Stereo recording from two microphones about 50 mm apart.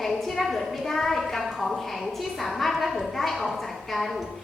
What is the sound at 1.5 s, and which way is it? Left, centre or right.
A woman's voice, centre.